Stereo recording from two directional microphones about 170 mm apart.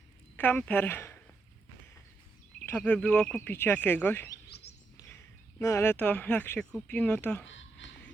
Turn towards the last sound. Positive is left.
turn(degrees=90)